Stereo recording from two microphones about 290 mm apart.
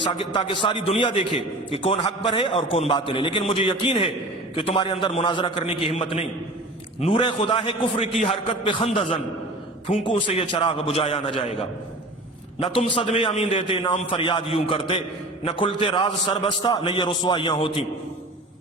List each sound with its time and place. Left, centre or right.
0.0 s a man's voice: centre